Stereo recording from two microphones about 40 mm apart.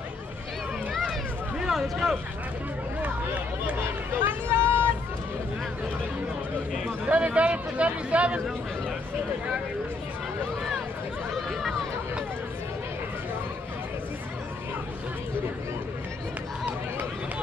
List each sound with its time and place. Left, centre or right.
1.7 s speech: centre
4.2 s vehicle: right
4.6 s vehicle: right
7.1 s speech: right